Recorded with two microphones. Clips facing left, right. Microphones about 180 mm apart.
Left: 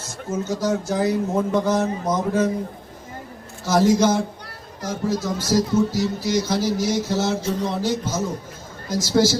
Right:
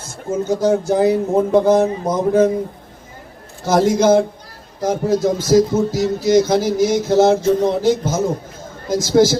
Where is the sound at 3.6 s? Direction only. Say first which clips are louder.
Right 3 dB; 55° right (ahead or behind).